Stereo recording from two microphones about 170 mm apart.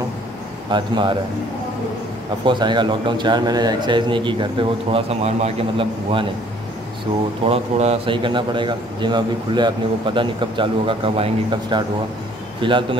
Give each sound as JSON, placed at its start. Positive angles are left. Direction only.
{"t": 0.7, "sound": "a man's voice", "side_deg": -25}
{"t": 2.4, "sound": "a man's voice", "side_deg": -25}
{"t": 7.4, "sound": "a man's voice", "side_deg": -35}